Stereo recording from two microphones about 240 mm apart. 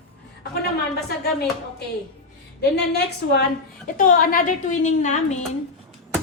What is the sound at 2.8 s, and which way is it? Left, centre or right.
A woman's voice, left.